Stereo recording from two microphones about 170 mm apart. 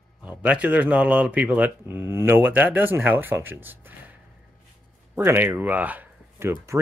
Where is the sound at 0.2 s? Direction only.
10° right (ahead or behind).